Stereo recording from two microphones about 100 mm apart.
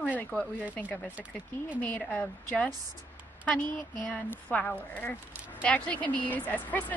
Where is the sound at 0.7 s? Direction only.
15° left (ahead or behind).